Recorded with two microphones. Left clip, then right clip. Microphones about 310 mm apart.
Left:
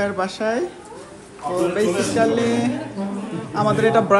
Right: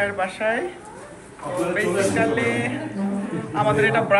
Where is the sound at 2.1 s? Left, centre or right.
Centre.